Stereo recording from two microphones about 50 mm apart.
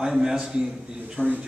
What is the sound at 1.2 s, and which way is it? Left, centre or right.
Speech, right.